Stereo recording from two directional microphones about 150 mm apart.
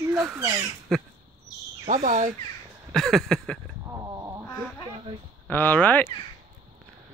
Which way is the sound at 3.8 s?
20° right (ahead or behind).